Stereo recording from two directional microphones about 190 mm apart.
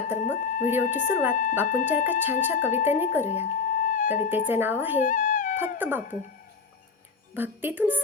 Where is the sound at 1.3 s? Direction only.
45° left (ahead or behind).